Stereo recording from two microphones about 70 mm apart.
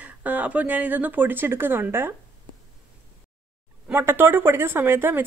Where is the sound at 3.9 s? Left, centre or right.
Right.